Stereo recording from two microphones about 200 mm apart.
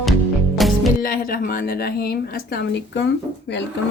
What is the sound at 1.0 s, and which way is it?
Speech, 45° left (ahead or behind).